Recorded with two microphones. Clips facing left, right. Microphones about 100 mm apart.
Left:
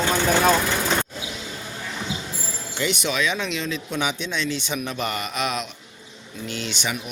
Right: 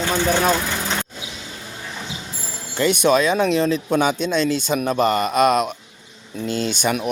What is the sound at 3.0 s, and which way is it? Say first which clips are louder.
Speech: right 12 dB; 40° right (ahead or behind).